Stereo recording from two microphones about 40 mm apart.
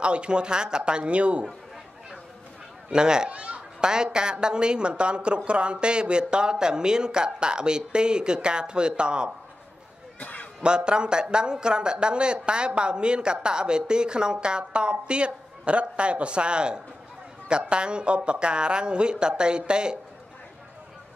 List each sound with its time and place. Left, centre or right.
0.0 s a child's voice: right
2.9 s a child's voice: centre
3.3 s a child's voice: right
10.2 s a sound: left
10.6 s a child's voice: right